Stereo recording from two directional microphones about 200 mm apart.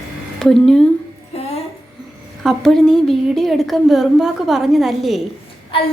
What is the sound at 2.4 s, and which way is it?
A woman's voice, 5° left (ahead or behind).